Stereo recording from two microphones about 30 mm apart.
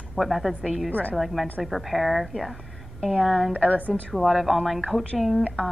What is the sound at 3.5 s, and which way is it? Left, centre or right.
Speech, left.